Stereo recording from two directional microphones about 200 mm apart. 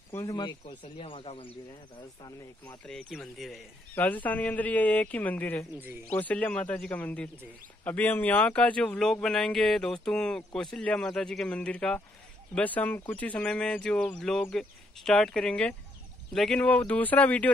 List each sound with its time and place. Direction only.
0.1 s speech: 15° left (ahead or behind)
2.6 s speech: 5° left (ahead or behind)